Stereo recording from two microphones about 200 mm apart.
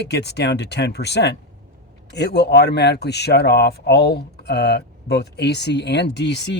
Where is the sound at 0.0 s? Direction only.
55° left (ahead or behind).